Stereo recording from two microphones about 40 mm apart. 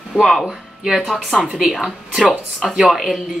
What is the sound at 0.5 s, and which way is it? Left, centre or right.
Speech, centre.